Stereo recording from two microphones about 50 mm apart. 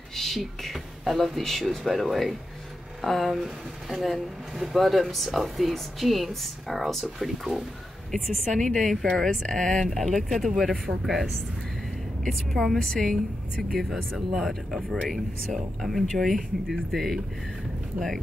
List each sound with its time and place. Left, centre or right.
0.1 s a sound: centre
0.4 s speech: centre
8.1 s a woman's voice: centre
12.3 s speech: centre
12.7 s a woman's voice: centre
13.1 s speech: centre